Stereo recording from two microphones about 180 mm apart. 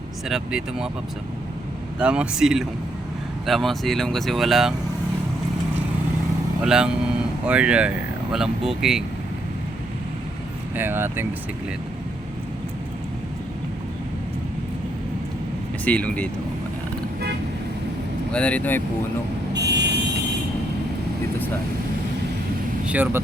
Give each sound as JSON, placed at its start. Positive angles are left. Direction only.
{"t": 0.3, "sound": "speech", "side_deg": -5}
{"t": 2.0, "sound": "speech", "side_deg": -5}
{"t": 6.7, "sound": "speech", "side_deg": -5}
{"t": 10.8, "sound": "speech", "side_deg": -10}
{"t": 15.8, "sound": "speech", "side_deg": 10}
{"t": 18.3, "sound": "speech", "side_deg": 5}
{"t": 19.5, "sound": "vehicle", "side_deg": -70}
{"t": 22.9, "sound": "speech", "side_deg": -10}